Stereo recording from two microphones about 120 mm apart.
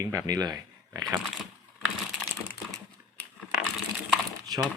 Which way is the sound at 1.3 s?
Centre (ahead or behind).